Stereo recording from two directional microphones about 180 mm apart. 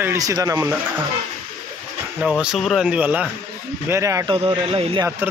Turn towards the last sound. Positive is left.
turn(degrees=-30)  # may be behind; listen again after turning